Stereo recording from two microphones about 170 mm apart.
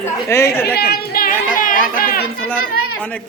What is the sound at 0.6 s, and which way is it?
A child's voice, 70° left (ahead or behind).